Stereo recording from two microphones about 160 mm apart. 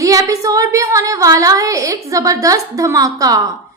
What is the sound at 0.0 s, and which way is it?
A woman's voice, 20° right (ahead or behind).